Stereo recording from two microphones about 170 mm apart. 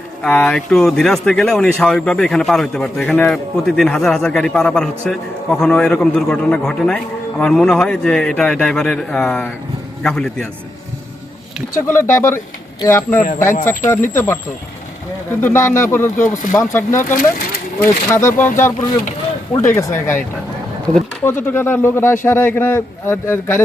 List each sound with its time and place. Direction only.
0.2 s speech: 5° left (ahead or behind)
11.9 s a man's voice: 15° left (ahead or behind)
16.1 s speech: 50° left (ahead or behind)
16.5 s a man's voice: 15° left (ahead or behind)